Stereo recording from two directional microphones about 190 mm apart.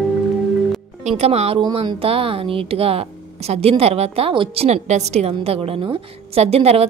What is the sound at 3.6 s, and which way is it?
A woman's voice, 30° right (ahead or behind).